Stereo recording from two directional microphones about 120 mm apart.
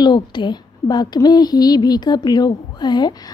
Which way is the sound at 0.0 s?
40° left (ahead or behind).